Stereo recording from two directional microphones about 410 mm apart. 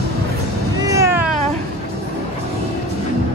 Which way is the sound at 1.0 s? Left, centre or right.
Centre.